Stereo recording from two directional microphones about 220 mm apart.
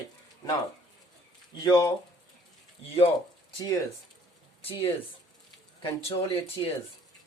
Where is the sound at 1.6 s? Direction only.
20° left (ahead or behind).